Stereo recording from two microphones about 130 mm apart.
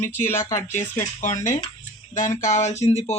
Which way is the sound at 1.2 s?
70° left (ahead or behind).